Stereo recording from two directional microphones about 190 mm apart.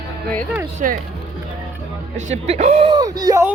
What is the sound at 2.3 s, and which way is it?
Speech, 35° right (ahead or behind).